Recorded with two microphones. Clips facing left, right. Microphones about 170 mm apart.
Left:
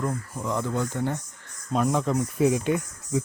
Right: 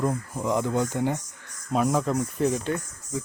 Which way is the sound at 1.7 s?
Centre (ahead or behind).